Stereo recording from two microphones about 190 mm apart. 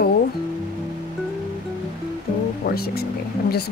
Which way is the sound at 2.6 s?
55° left (ahead or behind).